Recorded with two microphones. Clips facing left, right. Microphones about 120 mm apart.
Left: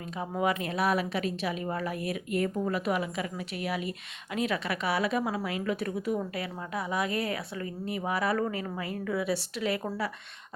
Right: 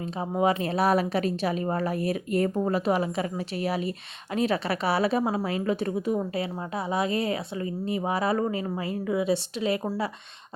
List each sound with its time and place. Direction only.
0.0 s a woman's voice: 25° right (ahead or behind)